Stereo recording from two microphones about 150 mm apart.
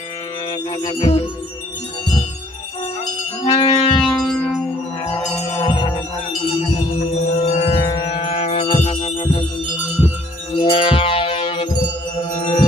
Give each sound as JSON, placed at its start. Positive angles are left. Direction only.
{"t": 0.8, "sound": "music", "side_deg": 40}
{"t": 3.4, "sound": "music", "side_deg": 40}
{"t": 4.0, "sound": "music", "side_deg": 0}
{"t": 5.5, "sound": "music", "side_deg": 30}
{"t": 7.3, "sound": "wind chime", "side_deg": 45}
{"t": 8.0, "sound": "music", "side_deg": 40}
{"t": 10.6, "sound": "wind chime", "side_deg": 35}